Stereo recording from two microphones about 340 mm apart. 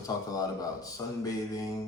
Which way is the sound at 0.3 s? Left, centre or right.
Centre.